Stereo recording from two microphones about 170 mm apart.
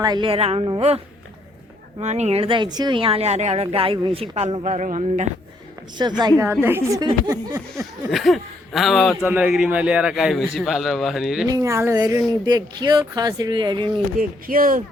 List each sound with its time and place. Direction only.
0.0 s speech: 25° right (ahead or behind); by 5.3 s 45° right (ahead or behind)
6.0 s speech: 25° right (ahead or behind)
6.4 s a woman's voice: 15° right (ahead or behind)
8.1 s speech: centre (ahead or behind)
11.4 s speech: 20° right (ahead or behind)
14.2 s speech: 55° right (ahead or behind)